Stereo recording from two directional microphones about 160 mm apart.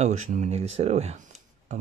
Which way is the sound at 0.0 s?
50° right (ahead or behind).